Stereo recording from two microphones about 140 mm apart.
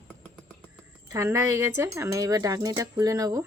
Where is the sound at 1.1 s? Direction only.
20° right (ahead or behind).